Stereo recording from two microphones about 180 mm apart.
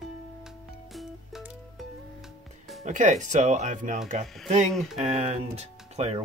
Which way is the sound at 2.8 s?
45° right (ahead or behind).